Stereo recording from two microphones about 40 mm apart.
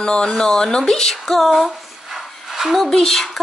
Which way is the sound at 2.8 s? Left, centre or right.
Centre.